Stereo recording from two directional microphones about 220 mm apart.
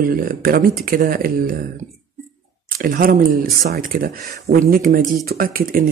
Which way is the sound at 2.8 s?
40° right (ahead or behind).